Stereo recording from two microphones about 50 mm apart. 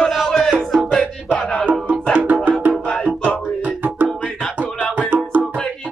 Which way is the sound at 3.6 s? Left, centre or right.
Right.